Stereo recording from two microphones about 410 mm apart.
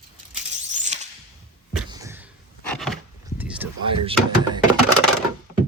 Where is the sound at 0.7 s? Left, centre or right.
Centre.